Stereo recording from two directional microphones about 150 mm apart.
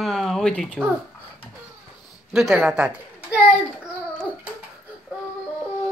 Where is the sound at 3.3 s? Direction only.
5° right (ahead or behind).